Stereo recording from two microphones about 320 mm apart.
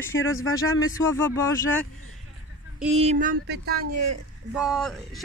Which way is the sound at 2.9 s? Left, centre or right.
Right.